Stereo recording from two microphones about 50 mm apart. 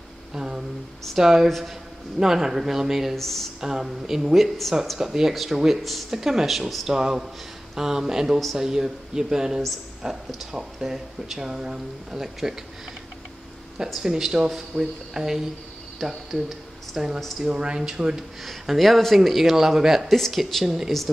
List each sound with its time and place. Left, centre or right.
0.3 s a sound: centre
1.1 s speech: centre
3.2 s speech: centre
3.6 s speech: centre
14.0 s speech: centre
16.4 s a sound: centre
17.5 s speech: centre
18.4 s speech: centre